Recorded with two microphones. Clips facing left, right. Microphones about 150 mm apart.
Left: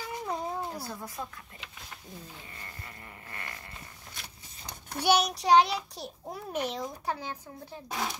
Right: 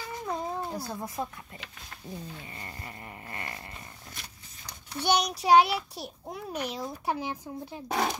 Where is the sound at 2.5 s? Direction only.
25° right (ahead or behind).